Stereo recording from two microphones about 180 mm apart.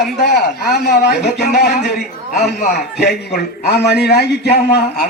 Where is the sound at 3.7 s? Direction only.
65° left (ahead or behind).